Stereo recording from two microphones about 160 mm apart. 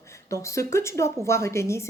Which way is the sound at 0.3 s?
20° left (ahead or behind).